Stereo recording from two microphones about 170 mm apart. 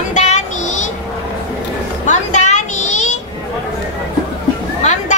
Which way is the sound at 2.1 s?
45° left (ahead or behind).